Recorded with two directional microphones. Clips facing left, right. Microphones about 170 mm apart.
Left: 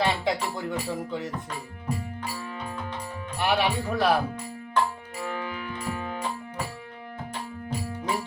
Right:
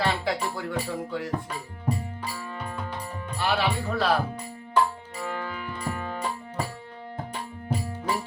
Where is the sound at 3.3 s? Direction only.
15° left (ahead or behind).